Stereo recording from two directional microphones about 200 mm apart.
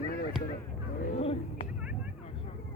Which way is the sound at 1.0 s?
30° left (ahead or behind).